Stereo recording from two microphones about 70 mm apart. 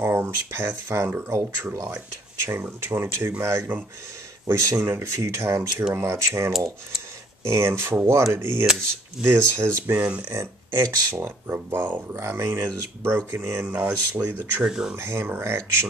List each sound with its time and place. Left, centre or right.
0.0 s speech: right
10.8 s speech: right
11.1 s speech: right
12.1 s speech: right
13.7 s speech: right
14.6 s speech: centre
15.0 s speech: right